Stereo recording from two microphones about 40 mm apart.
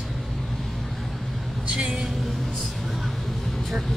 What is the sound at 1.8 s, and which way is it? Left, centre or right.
Speech, centre.